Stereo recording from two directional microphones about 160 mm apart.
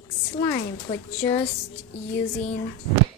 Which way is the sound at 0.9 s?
30° left (ahead or behind).